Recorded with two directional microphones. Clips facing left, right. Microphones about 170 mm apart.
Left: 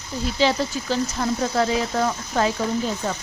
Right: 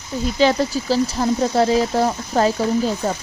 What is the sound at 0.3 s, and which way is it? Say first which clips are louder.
Speech: right 4 dB; 50° right (ahead or behind).